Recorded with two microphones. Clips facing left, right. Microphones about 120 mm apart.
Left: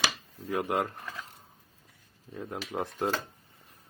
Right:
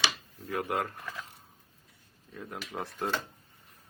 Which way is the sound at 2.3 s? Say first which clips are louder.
Left 4 dB; 25° left (ahead or behind).